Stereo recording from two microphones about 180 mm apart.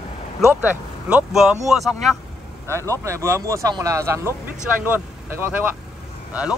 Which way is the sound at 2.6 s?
15° right (ahead or behind).